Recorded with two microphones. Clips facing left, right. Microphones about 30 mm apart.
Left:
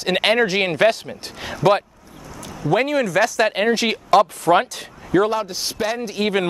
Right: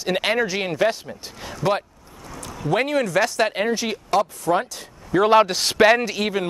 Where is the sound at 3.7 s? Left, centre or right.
Left.